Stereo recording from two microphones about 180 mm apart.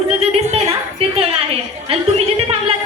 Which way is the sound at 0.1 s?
35° right (ahead or behind).